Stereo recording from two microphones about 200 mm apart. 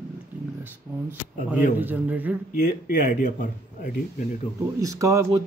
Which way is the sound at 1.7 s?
10° right (ahead or behind).